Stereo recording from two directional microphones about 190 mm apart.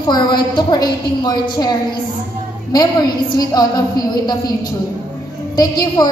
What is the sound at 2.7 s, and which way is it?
A woman's voice, 20° left (ahead or behind).